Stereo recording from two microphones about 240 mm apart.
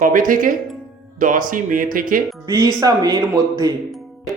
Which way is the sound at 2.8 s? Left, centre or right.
Centre.